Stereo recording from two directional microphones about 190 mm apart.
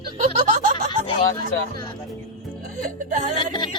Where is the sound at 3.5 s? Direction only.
25° left (ahead or behind).